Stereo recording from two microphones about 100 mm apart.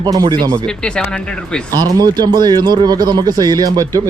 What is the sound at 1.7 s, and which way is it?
A man's voice, 40° right (ahead or behind).